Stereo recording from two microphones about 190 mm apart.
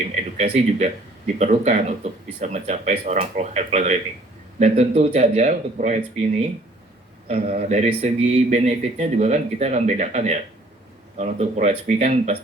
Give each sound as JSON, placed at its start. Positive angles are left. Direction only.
{"t": 0.1, "sound": "speech", "side_deg": -35}